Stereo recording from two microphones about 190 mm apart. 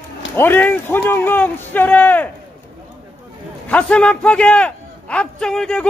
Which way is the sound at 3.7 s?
5° left (ahead or behind).